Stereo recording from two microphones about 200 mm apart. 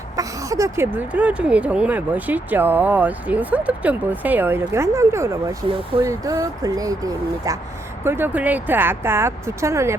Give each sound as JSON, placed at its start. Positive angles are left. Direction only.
{"t": 0.2, "sound": "speech", "side_deg": -15}